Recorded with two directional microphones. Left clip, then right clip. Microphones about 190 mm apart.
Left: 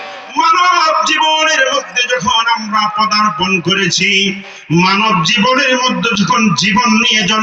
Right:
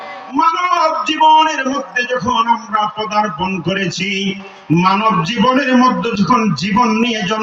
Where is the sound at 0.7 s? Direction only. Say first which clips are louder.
Left 3 dB; 55° right (ahead or behind).